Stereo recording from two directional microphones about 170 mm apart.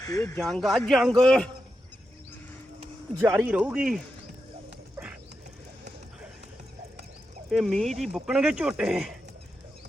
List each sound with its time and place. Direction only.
0.0 s speech: 20° left (ahead or behind)
0.3 s speech: centre (ahead or behind)
3.3 s speech: 10° right (ahead or behind)
7.5 s speech: centre (ahead or behind)